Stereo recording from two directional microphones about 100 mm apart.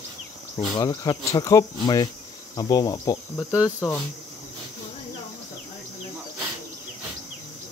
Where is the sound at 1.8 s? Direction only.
45° left (ahead or behind).